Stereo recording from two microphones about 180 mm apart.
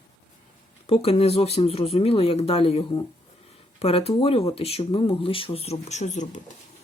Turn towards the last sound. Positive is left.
turn(degrees=45)  # may be behind; listen again after turning